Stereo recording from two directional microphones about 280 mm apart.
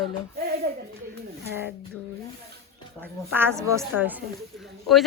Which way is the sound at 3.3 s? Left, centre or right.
Centre.